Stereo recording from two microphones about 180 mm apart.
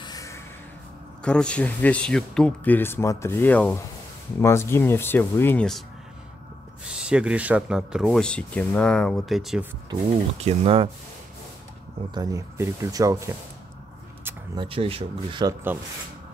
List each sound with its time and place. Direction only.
0.0 s a sound: 20° left (ahead or behind)
1.2 s speech: 5° left (ahead or behind)
7.0 s speech: 5° right (ahead or behind)
10.4 s speech: 30° right (ahead or behind)
12.1 s speech: 20° right (ahead or behind)